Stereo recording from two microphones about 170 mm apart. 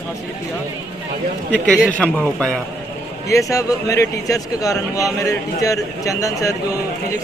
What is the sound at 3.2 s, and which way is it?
A man's voice, 20° left (ahead or behind).